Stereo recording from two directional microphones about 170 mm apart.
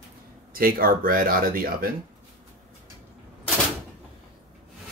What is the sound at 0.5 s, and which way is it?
Speech, 60° right (ahead or behind).